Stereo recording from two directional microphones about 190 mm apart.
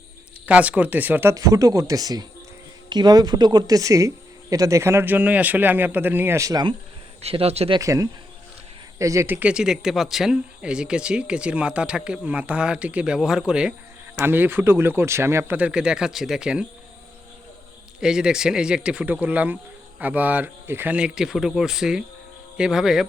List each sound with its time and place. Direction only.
0.4 s speech: 5° right (ahead or behind)
7.2 s speech: 30° right (ahead or behind)
7.8 s speech: 15° right (ahead or behind)
18.0 s speech: 5° right (ahead or behind)